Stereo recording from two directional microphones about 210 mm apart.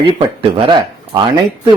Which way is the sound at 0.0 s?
25° right (ahead or behind).